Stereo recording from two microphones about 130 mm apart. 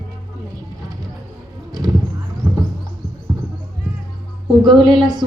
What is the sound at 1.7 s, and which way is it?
Clip-clop, 30° right (ahead or behind).